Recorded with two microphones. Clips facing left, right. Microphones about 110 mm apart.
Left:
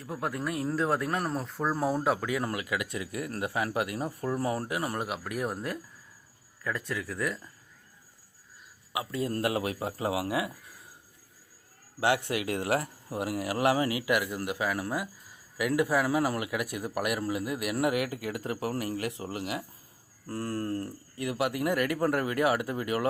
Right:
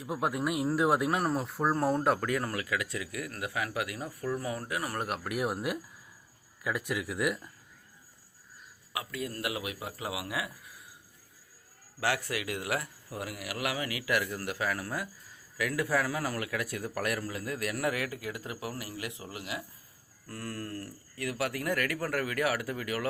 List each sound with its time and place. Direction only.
0.0 s a man's voice: 15° right (ahead or behind); by 2.4 s 5° left (ahead or behind)
2.4 s a man's voice: 20° left (ahead or behind)
4.9 s a man's voice: centre (ahead or behind)
8.9 s a man's voice: 20° left (ahead or behind)
9.3 s a man's voice: 35° left (ahead or behind)
11.9 s a man's voice: 20° left (ahead or behind)